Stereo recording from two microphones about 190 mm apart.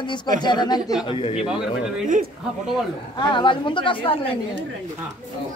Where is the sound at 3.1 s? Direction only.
25° left (ahead or behind).